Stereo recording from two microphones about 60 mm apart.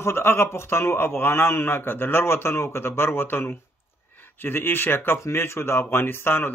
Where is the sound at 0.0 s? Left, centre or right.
Left.